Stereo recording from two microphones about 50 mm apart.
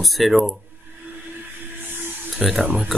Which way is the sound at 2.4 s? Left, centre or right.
Centre.